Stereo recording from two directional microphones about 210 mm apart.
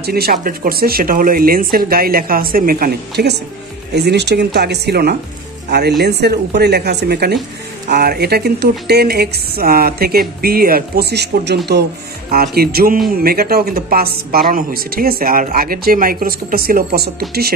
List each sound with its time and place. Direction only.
0.0 s a woman's voice: 50° right (ahead or behind)